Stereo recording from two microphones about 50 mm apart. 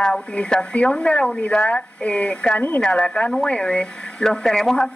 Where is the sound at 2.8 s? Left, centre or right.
Centre.